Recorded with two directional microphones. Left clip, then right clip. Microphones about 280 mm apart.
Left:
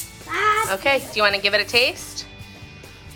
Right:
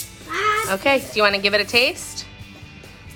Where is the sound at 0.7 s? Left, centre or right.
Centre.